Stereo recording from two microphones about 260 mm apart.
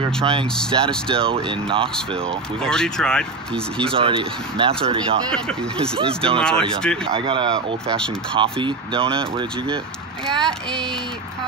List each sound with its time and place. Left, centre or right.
0.0 s speech: right
2.6 s speech: centre
3.9 s speech: right
5.9 s speech: right
6.4 s speech: centre
7.2 s speech: centre
10.2 s speech: centre